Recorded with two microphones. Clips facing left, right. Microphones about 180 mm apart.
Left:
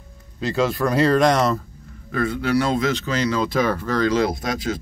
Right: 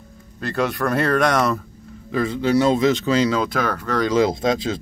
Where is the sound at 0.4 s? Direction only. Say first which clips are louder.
Left 1 dB; 60° right (ahead or behind).